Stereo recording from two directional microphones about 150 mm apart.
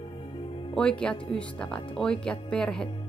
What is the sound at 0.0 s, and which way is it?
Music, 35° left (ahead or behind).